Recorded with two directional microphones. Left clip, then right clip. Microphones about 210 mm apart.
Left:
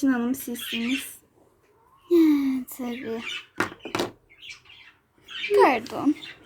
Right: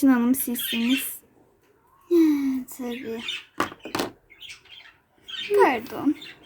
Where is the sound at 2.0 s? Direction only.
15° left (ahead or behind).